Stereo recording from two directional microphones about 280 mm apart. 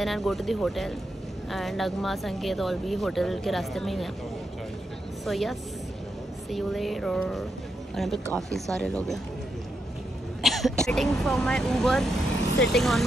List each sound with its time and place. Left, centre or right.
0.0 s speech: centre
5.2 s speech: centre
10.4 s speech: centre